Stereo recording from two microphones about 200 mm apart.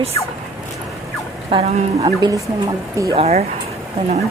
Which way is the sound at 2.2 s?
20° right (ahead or behind).